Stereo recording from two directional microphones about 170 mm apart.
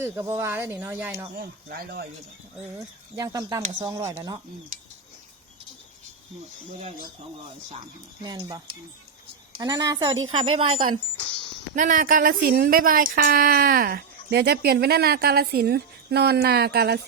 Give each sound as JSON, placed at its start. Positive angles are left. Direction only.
{"t": 0.0, "sound": "speech", "side_deg": -15}
{"t": 1.4, "sound": "speech", "side_deg": -65}
{"t": 2.7, "sound": "a woman's voice", "side_deg": -20}
{"t": 6.7, "sound": "speech", "side_deg": -40}
{"t": 8.2, "sound": "a woman's voice", "side_deg": -25}
{"t": 11.7, "sound": "speech", "side_deg": -50}